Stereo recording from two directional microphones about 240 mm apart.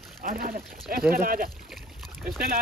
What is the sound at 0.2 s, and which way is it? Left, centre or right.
Speech, right.